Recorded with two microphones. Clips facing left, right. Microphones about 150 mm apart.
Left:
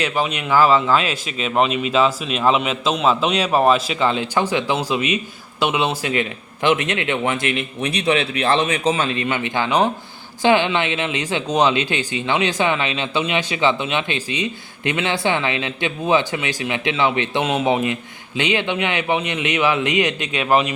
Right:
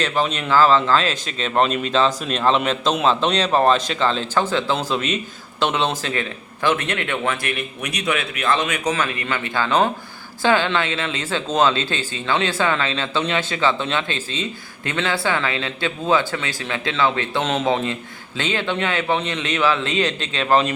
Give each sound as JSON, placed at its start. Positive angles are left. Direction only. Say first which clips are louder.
{"t": 0.0, "sound": "speech", "louder": "even", "side_deg": 10}